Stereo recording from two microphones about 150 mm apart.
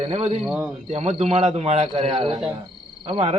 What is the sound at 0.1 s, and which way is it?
Speech, 45° right (ahead or behind).